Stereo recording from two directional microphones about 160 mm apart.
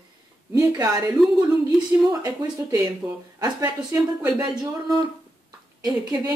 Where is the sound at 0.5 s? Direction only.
20° right (ahead or behind).